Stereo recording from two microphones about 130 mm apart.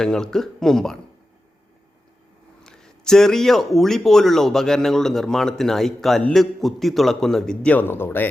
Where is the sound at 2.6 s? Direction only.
5° left (ahead or behind).